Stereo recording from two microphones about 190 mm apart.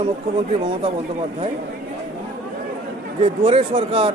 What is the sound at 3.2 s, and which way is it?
Speech, 30° right (ahead or behind).